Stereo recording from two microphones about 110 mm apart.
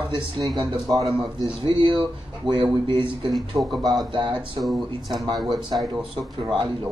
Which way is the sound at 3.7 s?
Centre (ahead or behind).